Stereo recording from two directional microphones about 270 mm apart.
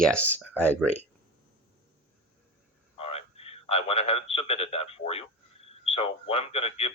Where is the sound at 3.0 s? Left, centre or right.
Left.